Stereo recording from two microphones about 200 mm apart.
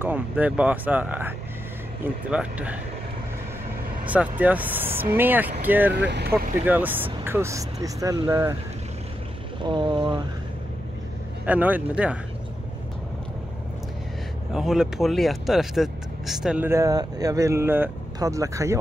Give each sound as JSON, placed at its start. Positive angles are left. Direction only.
{"t": 0.0, "sound": "speech", "side_deg": -10}
{"t": 2.3, "sound": "speech", "side_deg": -5}
{"t": 4.0, "sound": "speech", "side_deg": -5}
{"t": 5.9, "sound": "speech", "side_deg": -60}
{"t": 6.6, "sound": "speech", "side_deg": -10}
{"t": 9.6, "sound": "speech", "side_deg": -25}
{"t": 11.4, "sound": "speech", "side_deg": -10}
{"t": 14.5, "sound": "speech", "side_deg": 0}